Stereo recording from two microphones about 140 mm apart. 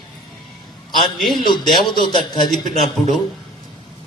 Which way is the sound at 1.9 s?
30° left (ahead or behind).